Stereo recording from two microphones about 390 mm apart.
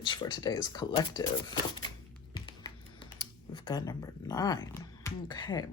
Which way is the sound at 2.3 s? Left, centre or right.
Centre.